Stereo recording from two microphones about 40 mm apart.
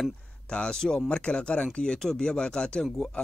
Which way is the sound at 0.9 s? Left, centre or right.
Left.